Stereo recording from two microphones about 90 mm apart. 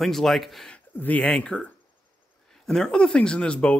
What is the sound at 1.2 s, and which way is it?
A man's voice, 10° left (ahead or behind).